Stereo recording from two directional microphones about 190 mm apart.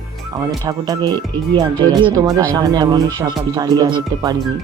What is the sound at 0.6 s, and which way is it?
Speech, 20° right (ahead or behind).